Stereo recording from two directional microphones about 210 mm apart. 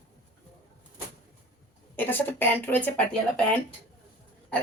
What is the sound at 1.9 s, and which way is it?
Speech, 10° left (ahead or behind).